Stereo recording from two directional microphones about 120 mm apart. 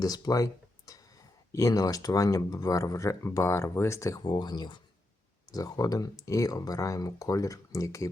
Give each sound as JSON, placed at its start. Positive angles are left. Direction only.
{"t": 0.0, "sound": "a sound", "side_deg": 30}
{"t": 1.5, "sound": "speech", "side_deg": 30}
{"t": 4.2, "sound": "speech", "side_deg": 40}